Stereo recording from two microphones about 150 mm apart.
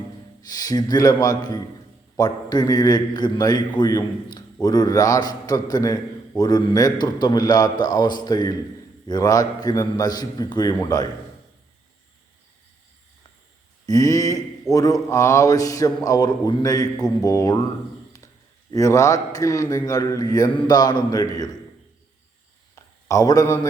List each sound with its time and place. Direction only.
0.4 s a man's voice: 25° left (ahead or behind)
13.8 s a man's voice: 25° left (ahead or behind)
18.7 s a man's voice: 20° left (ahead or behind)
22.7 s a sound: 20° left (ahead or behind)